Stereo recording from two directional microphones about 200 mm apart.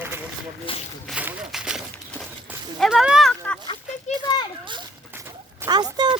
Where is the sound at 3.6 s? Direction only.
25° left (ahead or behind).